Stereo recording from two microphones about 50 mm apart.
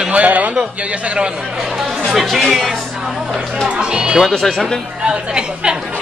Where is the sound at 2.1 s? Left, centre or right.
Centre.